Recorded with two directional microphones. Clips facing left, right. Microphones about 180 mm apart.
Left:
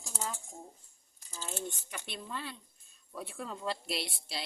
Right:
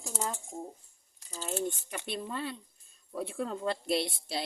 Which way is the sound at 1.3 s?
35° right (ahead or behind).